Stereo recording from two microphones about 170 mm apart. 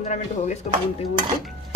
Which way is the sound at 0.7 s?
45° left (ahead or behind).